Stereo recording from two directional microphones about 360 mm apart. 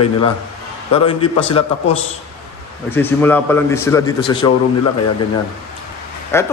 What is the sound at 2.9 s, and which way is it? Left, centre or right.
A man's voice, centre.